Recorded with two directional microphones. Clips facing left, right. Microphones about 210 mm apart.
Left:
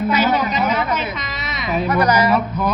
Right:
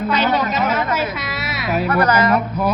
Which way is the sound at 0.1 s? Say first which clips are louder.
Right 1 dB; 5° left (ahead or behind).